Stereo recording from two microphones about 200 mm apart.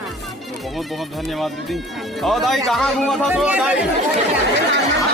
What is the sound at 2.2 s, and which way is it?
Speech, centre (ahead or behind).